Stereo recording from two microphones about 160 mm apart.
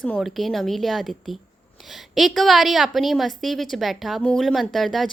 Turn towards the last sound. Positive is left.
turn(degrees=0)  # may be behind; listen again after turning